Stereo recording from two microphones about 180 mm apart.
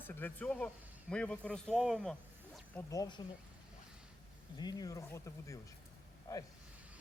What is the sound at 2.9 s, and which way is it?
Speech, 20° left (ahead or behind).